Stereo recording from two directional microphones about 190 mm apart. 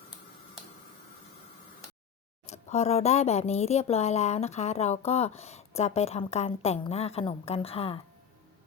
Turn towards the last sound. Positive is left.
turn(degrees=30)  # may be behind; listen again after turning